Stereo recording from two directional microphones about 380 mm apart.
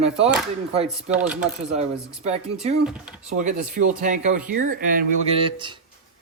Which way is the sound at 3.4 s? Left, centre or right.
Centre.